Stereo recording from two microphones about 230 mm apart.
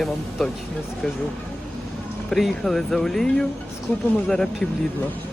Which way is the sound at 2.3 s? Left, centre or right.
Centre.